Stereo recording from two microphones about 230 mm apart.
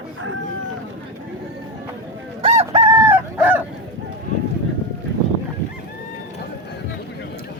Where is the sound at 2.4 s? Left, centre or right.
Right.